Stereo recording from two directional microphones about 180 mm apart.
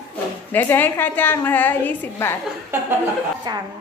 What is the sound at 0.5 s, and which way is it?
A woman's voice, 10° left (ahead or behind).